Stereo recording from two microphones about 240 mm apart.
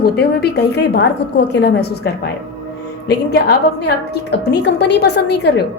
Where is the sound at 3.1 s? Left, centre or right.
Left.